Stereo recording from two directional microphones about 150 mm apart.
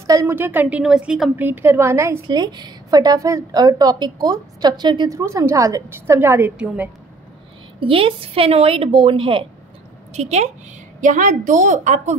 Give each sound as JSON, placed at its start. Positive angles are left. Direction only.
{"t": 0.0, "sound": "a woman's voice", "side_deg": -20}
{"t": 2.2, "sound": "a woman's voice", "side_deg": -30}
{"t": 7.8, "sound": "a woman's voice", "side_deg": -35}
{"t": 10.1, "sound": "a woman's voice", "side_deg": -45}